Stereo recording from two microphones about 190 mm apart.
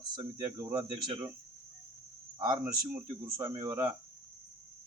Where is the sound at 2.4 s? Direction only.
25° right (ahead or behind).